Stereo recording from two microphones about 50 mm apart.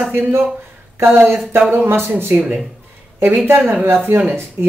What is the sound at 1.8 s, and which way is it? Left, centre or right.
Speech, right.